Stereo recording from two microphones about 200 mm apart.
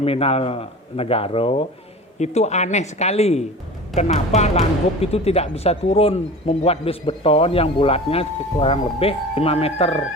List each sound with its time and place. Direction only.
0.0 s speech: 30° left (ahead or behind)